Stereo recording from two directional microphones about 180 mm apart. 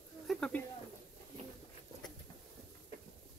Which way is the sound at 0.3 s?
5° left (ahead or behind).